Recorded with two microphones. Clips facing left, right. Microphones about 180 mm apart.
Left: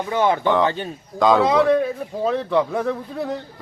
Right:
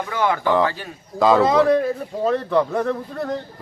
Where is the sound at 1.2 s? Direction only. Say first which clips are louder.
Right 1 dB; centre (ahead or behind).